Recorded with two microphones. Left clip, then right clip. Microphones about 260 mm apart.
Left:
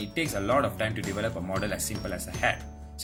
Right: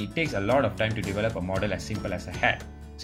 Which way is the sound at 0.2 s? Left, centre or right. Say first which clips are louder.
Right 2 dB; centre.